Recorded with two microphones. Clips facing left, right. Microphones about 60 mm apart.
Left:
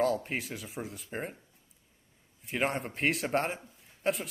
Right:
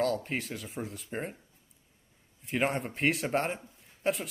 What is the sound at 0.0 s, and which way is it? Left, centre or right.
Speech, centre.